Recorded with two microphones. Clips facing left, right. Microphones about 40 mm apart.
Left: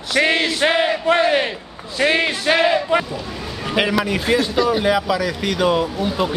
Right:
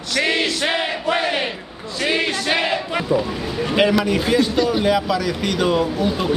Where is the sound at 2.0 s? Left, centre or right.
Left.